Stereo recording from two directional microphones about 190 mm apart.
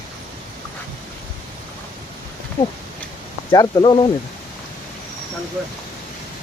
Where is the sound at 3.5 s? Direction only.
20° left (ahead or behind).